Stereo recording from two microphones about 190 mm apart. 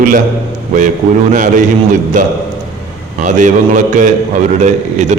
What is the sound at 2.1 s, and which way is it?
A man's voice, 40° right (ahead or behind).